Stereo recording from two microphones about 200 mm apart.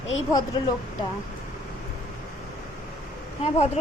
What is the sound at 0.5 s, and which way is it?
Speech, 20° left (ahead or behind).